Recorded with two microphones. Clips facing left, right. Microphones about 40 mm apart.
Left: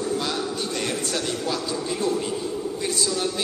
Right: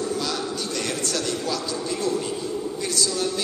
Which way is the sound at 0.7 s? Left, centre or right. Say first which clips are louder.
Right 1 dB; left.